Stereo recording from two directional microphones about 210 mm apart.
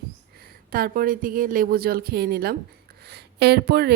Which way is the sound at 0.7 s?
45° right (ahead or behind).